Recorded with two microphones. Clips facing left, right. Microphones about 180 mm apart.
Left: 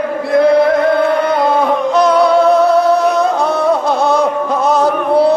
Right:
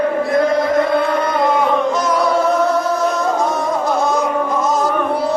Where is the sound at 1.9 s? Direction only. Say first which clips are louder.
Left 6 dB; 65° left (ahead or behind).